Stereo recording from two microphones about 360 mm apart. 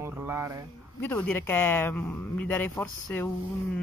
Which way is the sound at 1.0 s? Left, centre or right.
Centre.